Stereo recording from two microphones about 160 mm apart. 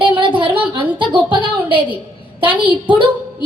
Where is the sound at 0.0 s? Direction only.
30° right (ahead or behind).